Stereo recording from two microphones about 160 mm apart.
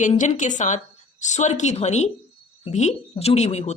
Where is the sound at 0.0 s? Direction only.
50° left (ahead or behind).